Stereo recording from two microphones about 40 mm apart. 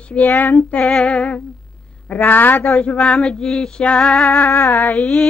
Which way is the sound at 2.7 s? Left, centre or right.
Left.